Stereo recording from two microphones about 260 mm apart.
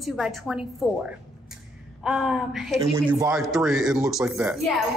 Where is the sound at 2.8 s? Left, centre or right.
Centre.